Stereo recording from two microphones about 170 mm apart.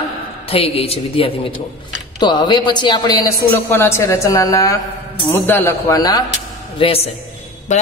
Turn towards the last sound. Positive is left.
turn(degrees=45)  # may be behind; listen again after turning